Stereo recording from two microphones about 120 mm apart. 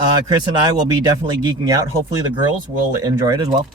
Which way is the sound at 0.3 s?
35° right (ahead or behind).